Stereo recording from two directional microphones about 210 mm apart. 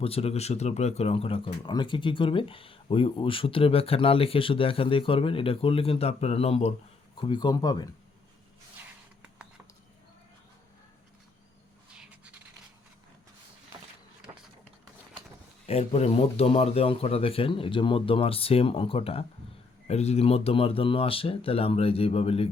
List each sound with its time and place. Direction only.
0.0 s speech: 30° left (ahead or behind)
14.3 s a sound: 20° right (ahead or behind)
15.6 s speech: 30° left (ahead or behind)